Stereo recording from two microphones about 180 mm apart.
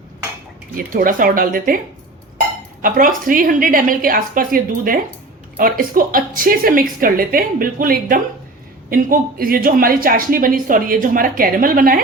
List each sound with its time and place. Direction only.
0.8 s a woman's voice: 50° right (ahead or behind)
2.8 s a woman's voice: 50° right (ahead or behind)